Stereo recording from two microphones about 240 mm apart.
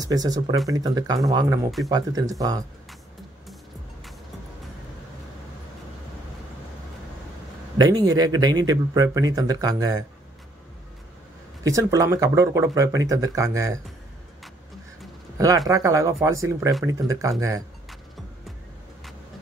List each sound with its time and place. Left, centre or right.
0.0 s speech: centre
7.7 s speech: centre
11.6 s speech: centre
15.3 s speech: centre